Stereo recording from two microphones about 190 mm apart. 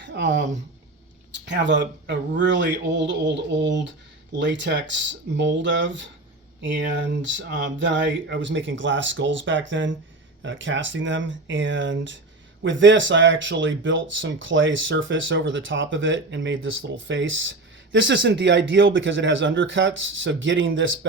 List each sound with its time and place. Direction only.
0.0 s speech: 65° right (ahead or behind); by 21.1 s 85° right